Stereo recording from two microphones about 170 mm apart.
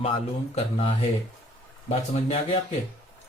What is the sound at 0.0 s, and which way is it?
Speech, 35° left (ahead or behind).